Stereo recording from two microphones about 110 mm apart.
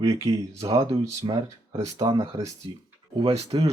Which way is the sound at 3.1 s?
65° right (ahead or behind).